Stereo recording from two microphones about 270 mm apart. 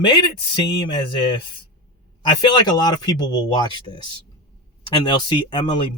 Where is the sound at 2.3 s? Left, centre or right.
Centre.